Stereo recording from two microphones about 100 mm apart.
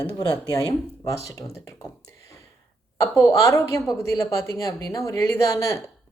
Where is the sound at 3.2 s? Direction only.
35° left (ahead or behind).